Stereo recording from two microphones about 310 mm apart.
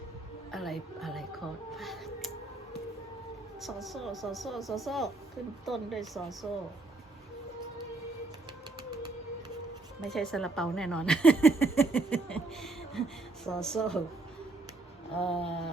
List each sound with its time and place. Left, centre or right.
0.5 s a woman's voice: centre
1.7 s music: centre
3.6 s speech: centre
10.1 s speech: centre
15.2 s a sound: centre